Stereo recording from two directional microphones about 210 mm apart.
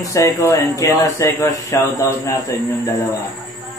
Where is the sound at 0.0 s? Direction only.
15° left (ahead or behind).